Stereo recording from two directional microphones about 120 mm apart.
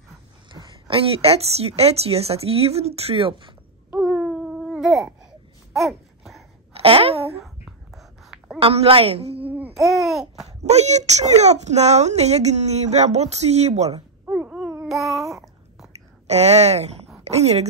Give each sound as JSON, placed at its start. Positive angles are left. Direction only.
{"t": 0.5, "sound": "a woman's voice", "side_deg": -45}
{"t": 4.0, "sound": "baby cry", "side_deg": 0}
{"t": 5.2, "sound": "a sound", "side_deg": -5}
{"t": 6.7, "sound": "a sound", "side_deg": -55}
{"t": 7.4, "sound": "whispering", "side_deg": 0}
{"t": 8.5, "sound": "a woman's voice", "side_deg": -50}
{"t": 9.8, "sound": "babbling", "side_deg": 0}
{"t": 10.6, "sound": "a child's voice", "side_deg": -65}
{"t": 14.8, "sound": "child singing", "side_deg": 0}
{"t": 16.3, "sound": "a woman's voice", "side_deg": -65}